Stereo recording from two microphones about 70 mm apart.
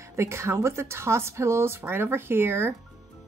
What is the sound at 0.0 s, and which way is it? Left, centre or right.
A woman's voice, right.